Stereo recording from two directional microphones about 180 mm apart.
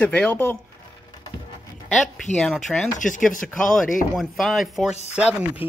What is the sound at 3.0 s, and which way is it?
Chopping, 45° left (ahead or behind).